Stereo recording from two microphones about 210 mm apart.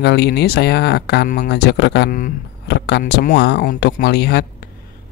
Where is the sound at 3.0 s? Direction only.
40° left (ahead or behind).